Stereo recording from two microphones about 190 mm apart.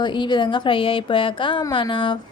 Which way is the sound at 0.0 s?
25° left (ahead or behind).